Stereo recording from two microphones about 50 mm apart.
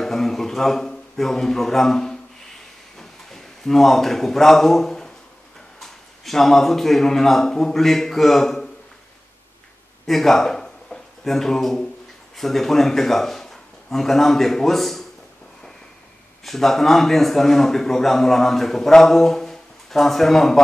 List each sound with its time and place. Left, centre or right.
0.0 s a sound: centre
3.0 s a man's voice: centre
10.0 s a man's voice: centre
16.4 s a man's voice: centre